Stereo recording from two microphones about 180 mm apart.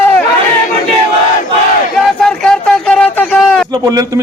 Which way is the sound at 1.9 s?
5° left (ahead or behind).